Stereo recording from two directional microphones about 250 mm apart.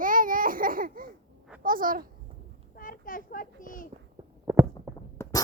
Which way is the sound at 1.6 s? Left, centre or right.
Right.